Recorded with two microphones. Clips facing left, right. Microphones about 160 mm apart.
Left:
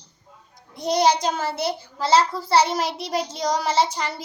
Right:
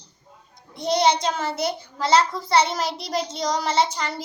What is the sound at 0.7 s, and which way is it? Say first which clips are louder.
Speech: left 1 dB; 5° left (ahead or behind).